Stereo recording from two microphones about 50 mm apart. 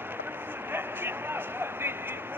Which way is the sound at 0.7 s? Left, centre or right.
Right.